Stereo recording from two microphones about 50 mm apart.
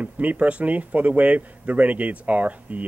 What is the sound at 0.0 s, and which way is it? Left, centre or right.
Speech, right.